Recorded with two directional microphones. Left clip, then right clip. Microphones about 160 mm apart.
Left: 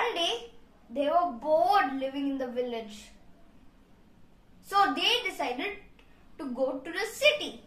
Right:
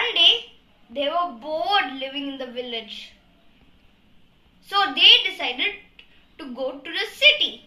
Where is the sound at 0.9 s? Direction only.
20° left (ahead or behind).